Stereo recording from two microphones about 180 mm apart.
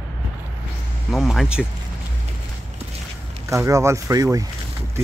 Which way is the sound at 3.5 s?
15° right (ahead or behind).